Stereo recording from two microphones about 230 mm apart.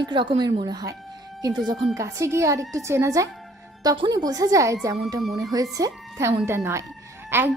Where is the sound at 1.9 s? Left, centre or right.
Centre.